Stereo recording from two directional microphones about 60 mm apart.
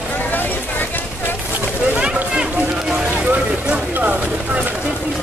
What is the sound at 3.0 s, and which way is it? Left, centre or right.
Music, right.